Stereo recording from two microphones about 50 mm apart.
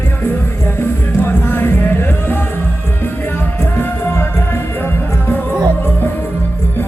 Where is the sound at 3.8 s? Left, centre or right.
Left.